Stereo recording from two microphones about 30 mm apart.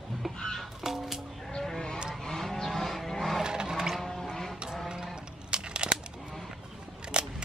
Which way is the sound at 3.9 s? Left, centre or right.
Centre.